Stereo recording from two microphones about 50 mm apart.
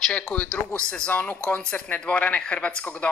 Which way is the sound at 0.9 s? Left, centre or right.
Left.